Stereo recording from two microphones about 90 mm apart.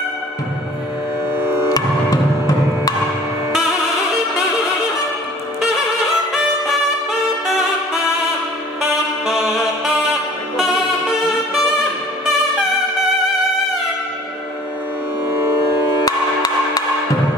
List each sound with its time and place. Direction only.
1.7 s music: 40° left (ahead or behind)
9.2 s saxophone: 5° right (ahead or behind)
16.1 s music: 45° left (ahead or behind)